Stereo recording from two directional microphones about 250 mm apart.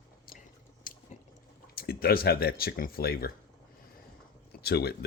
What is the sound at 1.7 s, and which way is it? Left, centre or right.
Speech, left.